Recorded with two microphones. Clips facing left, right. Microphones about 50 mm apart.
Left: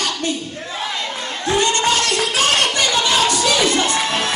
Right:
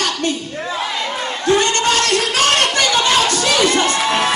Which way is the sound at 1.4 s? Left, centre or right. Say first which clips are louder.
Right 2 dB; right.